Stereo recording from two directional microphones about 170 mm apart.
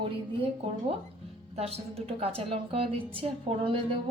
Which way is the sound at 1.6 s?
35° right (ahead or behind).